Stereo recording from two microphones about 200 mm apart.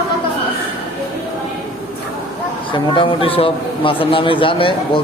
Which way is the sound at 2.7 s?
25° left (ahead or behind).